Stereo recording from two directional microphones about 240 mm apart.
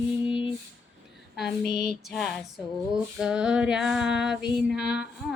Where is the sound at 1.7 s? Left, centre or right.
Left.